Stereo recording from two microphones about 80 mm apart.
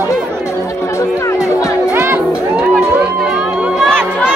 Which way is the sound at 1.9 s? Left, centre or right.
Right.